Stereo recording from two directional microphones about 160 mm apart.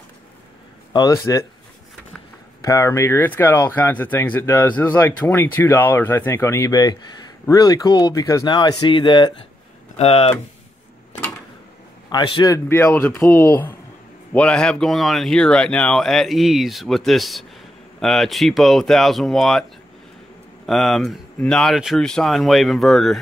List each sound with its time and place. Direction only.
0.9 s speech: 20° left (ahead or behind)
2.6 s speech: 20° left (ahead or behind); by 10.3 s 35° left (ahead or behind)
12.1 s speech: 25° left (ahead or behind); by 19.6 s centre (ahead or behind)
20.6 s speech: centre (ahead or behind)